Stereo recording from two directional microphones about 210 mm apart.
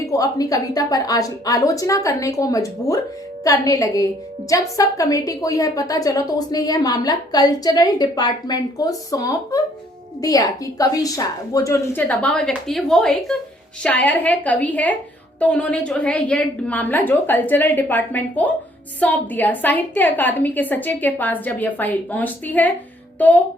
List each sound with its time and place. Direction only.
0.0 s a woman's voice: 15° left (ahead or behind)